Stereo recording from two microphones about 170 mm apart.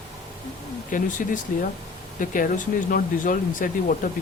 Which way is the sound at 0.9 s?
50° left (ahead or behind).